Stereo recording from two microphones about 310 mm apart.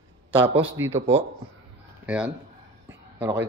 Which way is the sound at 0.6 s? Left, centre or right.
Centre.